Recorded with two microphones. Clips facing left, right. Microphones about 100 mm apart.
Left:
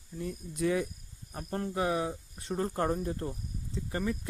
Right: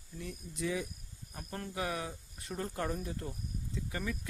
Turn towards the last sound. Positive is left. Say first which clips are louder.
# left 5 dB
turn(degrees=30)  # may be behind; listen again after turning